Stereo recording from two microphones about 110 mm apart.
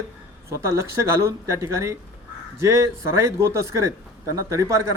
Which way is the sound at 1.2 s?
25° right (ahead or behind).